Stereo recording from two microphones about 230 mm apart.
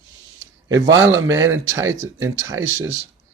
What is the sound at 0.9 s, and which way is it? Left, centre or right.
Speech, centre.